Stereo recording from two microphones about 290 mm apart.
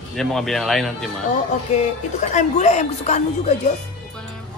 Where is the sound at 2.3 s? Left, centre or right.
Left.